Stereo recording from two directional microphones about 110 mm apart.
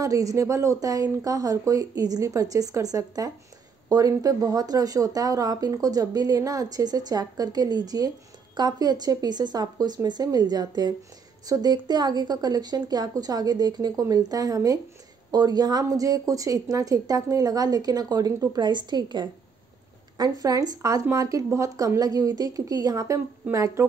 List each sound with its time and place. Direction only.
0.0 s speech: 30° right (ahead or behind)